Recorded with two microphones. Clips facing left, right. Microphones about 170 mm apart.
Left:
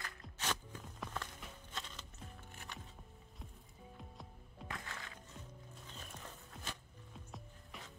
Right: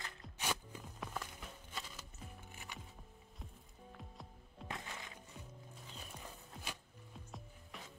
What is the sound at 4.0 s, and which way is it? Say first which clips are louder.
Music: even; centre (ahead or behind).